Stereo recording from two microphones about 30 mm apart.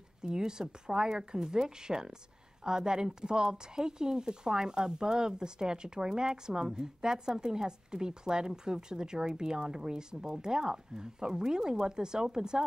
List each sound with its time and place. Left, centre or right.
0.2 s speech: right